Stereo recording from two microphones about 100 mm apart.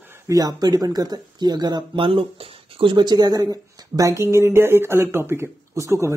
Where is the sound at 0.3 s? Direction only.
40° right (ahead or behind).